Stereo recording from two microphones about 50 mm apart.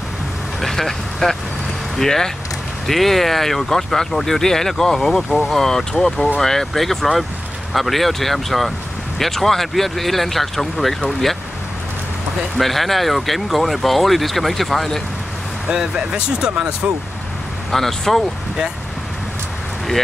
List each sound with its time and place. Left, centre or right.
0.6 s speech: centre
12.5 s speech: centre
15.7 s speech: centre
17.6 s speech: centre